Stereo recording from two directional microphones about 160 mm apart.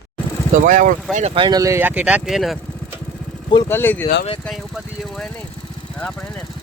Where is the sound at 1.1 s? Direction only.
40° right (ahead or behind); by 2.6 s centre (ahead or behind).